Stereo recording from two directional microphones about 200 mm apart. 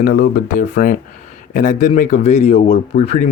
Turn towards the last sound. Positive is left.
turn(degrees=35)  # may be behind; listen again after turning